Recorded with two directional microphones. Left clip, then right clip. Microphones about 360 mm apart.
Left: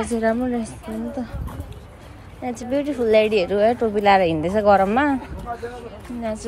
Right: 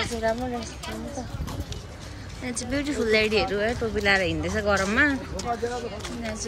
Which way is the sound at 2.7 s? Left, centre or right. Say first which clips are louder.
Left 6 dB; centre.